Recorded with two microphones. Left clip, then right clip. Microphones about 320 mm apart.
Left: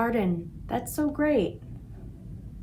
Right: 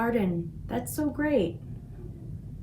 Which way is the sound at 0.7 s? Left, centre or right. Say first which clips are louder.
Left 3 dB; centre.